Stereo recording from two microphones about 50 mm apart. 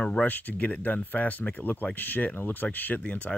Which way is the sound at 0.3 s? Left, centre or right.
Left.